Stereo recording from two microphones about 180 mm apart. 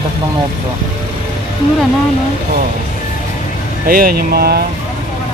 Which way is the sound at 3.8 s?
55° right (ahead or behind).